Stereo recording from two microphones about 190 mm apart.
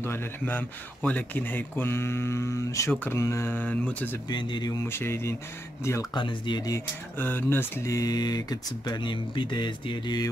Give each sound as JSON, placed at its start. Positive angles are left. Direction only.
{"t": 0.0, "sound": "speech", "side_deg": 10}
{"t": 4.3, "sound": "speech", "side_deg": 25}